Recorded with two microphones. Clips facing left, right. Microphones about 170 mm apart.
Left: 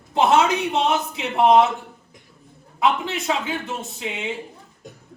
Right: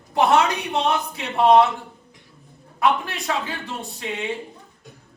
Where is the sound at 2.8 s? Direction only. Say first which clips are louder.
Even; 20° left (ahead or behind).